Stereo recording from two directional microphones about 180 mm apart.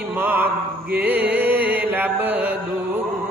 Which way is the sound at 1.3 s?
10° right (ahead or behind).